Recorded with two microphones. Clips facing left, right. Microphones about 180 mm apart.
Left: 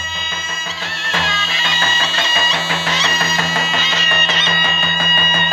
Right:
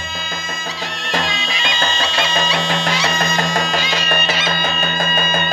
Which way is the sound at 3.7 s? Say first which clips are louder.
Right 2 dB; 10° right (ahead or behind).